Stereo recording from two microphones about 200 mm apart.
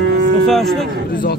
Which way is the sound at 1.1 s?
45° left (ahead or behind).